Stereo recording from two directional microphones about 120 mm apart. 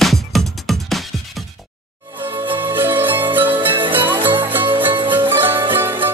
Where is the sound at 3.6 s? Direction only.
45° right (ahead or behind).